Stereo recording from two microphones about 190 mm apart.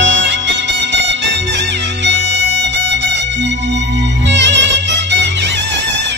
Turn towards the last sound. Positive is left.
turn(degrees=-70)  # may be behind; listen again after turning